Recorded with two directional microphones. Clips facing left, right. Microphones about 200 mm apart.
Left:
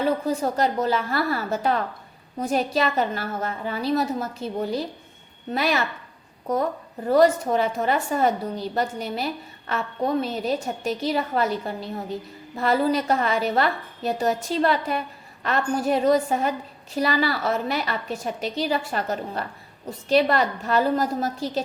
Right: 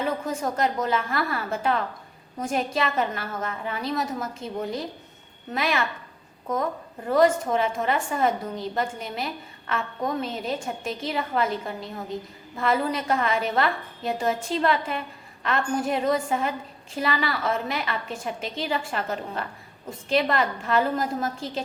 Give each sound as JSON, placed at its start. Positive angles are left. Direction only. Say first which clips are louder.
{"t": 0.3, "sound": "a woman's voice", "louder": "left 3 dB", "side_deg": 35}
{"t": 7.1, "sound": "a woman's voice", "louder": "left 2 dB", "side_deg": 35}